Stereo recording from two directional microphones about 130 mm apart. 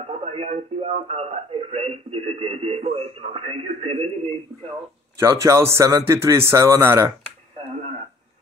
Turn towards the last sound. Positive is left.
turn(degrees=-20)  # may be behind; listen again after turning